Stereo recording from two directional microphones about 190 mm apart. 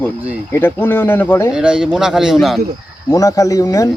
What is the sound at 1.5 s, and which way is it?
Speech, 5° right (ahead or behind).